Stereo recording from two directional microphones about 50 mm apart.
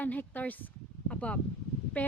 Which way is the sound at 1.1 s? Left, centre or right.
Left.